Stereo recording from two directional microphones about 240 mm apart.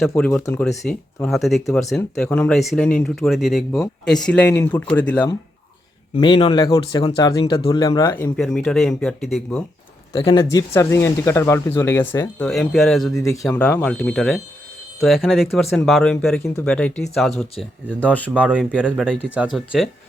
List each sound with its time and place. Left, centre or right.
0.1 s speech: centre
6.1 s speech: left; by 9.6 s centre
10.1 s speech: centre
13.1 s speech: centre
18.3 s speech: centre